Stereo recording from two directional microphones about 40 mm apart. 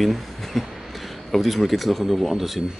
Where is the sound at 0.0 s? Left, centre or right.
Centre.